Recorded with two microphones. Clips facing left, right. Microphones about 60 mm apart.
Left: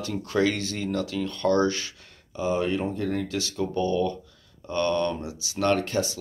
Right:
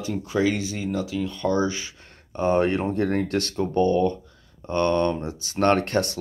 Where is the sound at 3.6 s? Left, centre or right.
Right.